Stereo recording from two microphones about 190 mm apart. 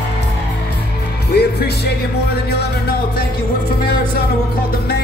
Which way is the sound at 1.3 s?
60° left (ahead or behind).